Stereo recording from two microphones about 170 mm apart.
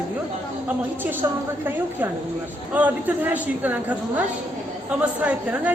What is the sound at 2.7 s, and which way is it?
A woman's voice, 10° right (ahead or behind).